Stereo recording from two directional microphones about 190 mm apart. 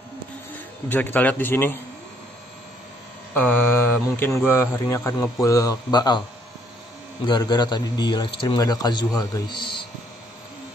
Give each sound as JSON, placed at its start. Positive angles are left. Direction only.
{"t": 0.8, "sound": "a man's voice", "side_deg": 10}
{"t": 3.3, "sound": "mantra", "side_deg": 10}
{"t": 4.5, "sound": "a man's voice", "side_deg": 10}
{"t": 7.2, "sound": "a man's voice", "side_deg": 25}